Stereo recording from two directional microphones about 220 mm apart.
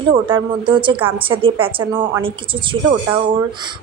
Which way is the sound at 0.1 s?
20° right (ahead or behind).